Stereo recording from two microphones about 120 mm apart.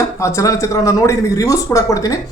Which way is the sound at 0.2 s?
25° left (ahead or behind).